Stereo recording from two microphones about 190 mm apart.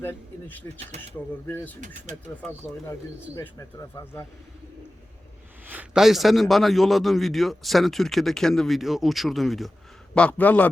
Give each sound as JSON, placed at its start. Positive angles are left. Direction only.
{"t": 0.0, "sound": "speech", "side_deg": 10}
{"t": 0.8, "sound": "speech", "side_deg": -35}
{"t": 1.5, "sound": "speech", "side_deg": 10}
{"t": 3.3, "sound": "speech", "side_deg": 15}
{"t": 5.6, "sound": "a man's voice", "side_deg": -5}